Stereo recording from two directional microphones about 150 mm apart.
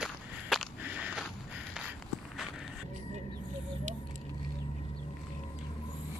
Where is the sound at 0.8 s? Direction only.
10° right (ahead or behind).